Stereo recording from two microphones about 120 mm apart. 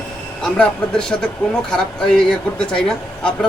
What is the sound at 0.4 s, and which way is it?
A man's voice, 5° left (ahead or behind).